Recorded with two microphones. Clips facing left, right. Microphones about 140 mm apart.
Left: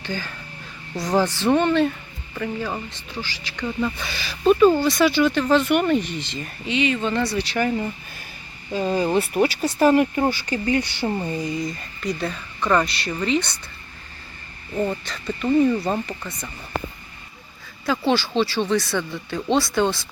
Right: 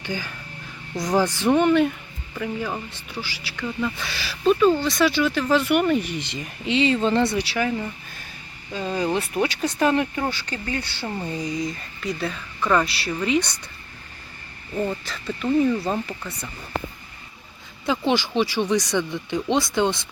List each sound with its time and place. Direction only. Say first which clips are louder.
0.0 s speech: even; 10° right (ahead or behind)
3.8 s speech: left 2 dB; 5° left (ahead or behind); by 6.5 s 15° right (ahead or behind)
6.7 s speech: right 2 dB; 30° right (ahead or behind)
7.3 s speech: left 1 dB; 5° right (ahead or behind)
8.7 s speech: left 4 dB; 10° left (ahead or behind)
11.3 s speech: left 1 dB; centre (ahead or behind)
15.0 s speech: left 1 dB; centre (ahead or behind)
17.8 s speech: left 1 dB; 15° right (ahead or behind)